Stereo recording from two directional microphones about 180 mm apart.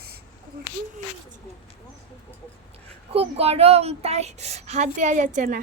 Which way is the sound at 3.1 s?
35° right (ahead or behind).